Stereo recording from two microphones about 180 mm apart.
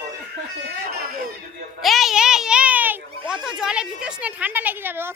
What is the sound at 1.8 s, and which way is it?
A child's voice, centre (ahead or behind).